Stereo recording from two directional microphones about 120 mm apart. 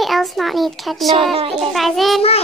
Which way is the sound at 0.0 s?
Centre (ahead or behind).